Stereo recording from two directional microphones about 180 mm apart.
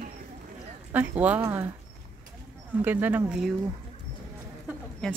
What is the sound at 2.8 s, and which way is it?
Speech, 10° right (ahead or behind).